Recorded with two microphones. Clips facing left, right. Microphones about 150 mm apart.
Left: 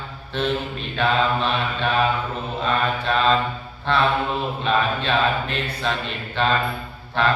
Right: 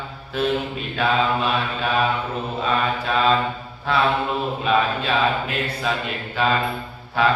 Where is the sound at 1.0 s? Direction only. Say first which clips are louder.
Even; 5° right (ahead or behind).